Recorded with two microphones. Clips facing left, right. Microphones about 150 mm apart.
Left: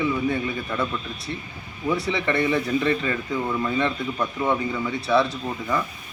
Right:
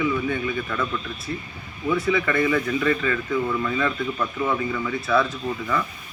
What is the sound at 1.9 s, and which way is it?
Speech, 35° left (ahead or behind).